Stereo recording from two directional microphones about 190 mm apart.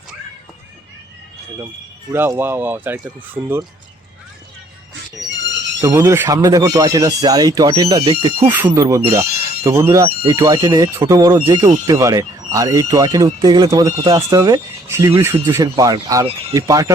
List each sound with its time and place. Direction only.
2.1 s speech: 10° right (ahead or behind)
5.3 s a sound: 70° right (ahead or behind)
5.8 s speech: 15° right (ahead or behind); by 8.5 s 30° right (ahead or behind)
8.5 s speech: 15° right (ahead or behind)